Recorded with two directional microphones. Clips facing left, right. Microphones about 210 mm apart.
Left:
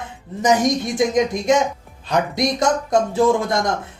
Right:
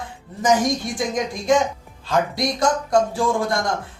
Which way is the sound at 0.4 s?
20° left (ahead or behind).